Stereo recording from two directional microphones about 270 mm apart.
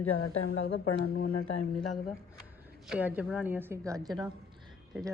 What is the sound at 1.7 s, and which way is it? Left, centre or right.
Speech, centre.